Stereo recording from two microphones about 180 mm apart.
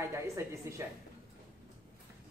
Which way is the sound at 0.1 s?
15° right (ahead or behind).